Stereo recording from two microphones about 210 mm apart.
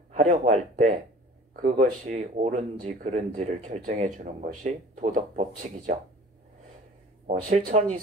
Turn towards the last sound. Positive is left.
turn(degrees=-40)  # may be behind; listen again after turning